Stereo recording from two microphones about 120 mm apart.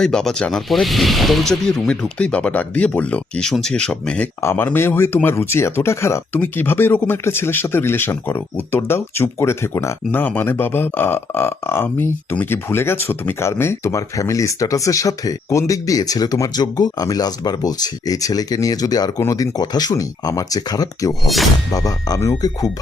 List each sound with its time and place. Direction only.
0.0 s speech: 5° left (ahead or behind)
4.4 s speech: 20° left (ahead or behind)